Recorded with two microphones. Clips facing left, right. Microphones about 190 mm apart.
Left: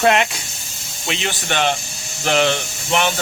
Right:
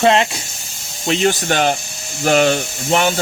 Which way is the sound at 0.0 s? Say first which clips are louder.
Right 2 dB; 30° right (ahead or behind).